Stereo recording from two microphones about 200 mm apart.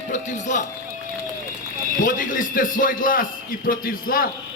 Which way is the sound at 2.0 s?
40° left (ahead or behind).